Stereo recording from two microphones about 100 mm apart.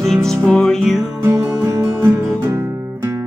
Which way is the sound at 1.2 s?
25° right (ahead or behind).